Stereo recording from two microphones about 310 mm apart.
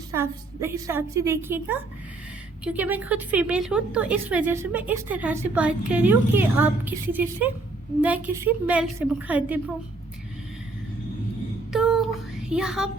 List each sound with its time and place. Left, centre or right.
0.1 s a woman's voice: centre
11.7 s child singing: centre
12.5 s a woman's voice: centre